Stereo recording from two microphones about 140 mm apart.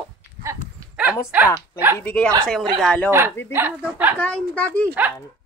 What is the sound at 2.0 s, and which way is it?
A child's voice, 10° left (ahead or behind).